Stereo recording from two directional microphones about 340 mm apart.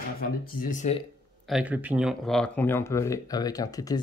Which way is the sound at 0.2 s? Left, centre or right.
Left.